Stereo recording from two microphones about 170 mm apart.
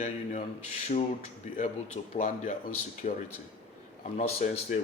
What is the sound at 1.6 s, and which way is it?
Speech, 40° left (ahead or behind).